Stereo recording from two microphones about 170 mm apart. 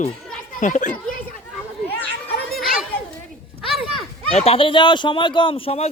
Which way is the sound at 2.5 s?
Centre (ahead or behind).